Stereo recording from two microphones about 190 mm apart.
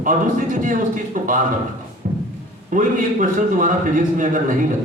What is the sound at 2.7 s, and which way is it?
Speech, 45° right (ahead or behind).